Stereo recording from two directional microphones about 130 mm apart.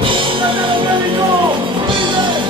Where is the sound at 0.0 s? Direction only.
40° right (ahead or behind).